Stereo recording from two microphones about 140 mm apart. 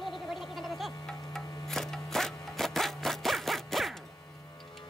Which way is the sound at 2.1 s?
5° left (ahead or behind).